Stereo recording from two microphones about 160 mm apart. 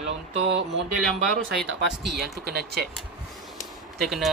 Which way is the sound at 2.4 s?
90° right.